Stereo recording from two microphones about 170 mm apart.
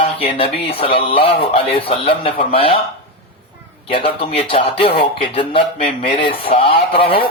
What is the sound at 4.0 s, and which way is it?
Speech, 35° left (ahead or behind).